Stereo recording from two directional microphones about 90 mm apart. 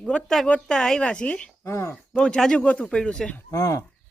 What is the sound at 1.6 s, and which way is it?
Speech, 30° left (ahead or behind).